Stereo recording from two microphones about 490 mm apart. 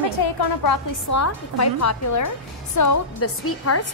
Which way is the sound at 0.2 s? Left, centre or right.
Left.